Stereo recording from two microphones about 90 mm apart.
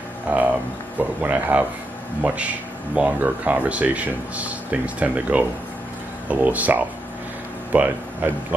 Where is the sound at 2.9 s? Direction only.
15° right (ahead or behind).